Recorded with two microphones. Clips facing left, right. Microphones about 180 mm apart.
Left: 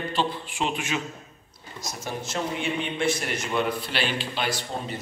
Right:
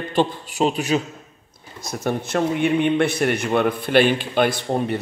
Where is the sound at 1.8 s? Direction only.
60° right (ahead or behind).